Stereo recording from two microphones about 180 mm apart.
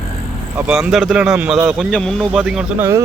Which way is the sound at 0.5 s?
5° right (ahead or behind).